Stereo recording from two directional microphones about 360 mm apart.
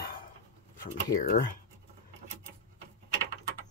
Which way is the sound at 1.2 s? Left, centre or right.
Left.